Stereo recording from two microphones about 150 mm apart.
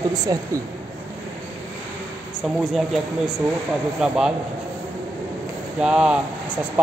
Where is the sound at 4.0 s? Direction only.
5° right (ahead or behind).